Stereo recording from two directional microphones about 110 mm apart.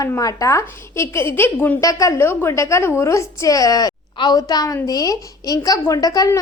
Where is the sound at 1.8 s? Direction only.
30° left (ahead or behind).